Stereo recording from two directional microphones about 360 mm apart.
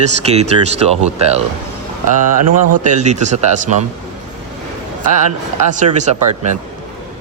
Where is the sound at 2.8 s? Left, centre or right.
Centre.